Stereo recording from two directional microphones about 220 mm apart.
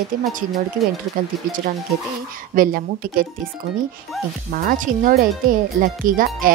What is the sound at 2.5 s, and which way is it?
Speech, 40° right (ahead or behind).